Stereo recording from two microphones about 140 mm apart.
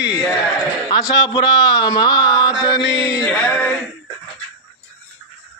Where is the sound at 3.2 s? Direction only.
10° left (ahead or behind).